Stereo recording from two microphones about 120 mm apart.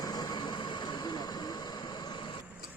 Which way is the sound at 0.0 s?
35° left (ahead or behind).